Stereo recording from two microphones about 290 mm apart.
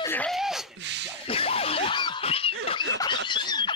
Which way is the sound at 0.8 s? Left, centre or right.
Right.